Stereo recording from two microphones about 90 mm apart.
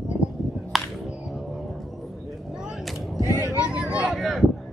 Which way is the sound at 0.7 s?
Centre (ahead or behind).